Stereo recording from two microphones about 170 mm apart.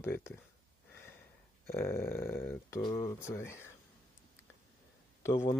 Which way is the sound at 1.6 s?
15° left (ahead or behind).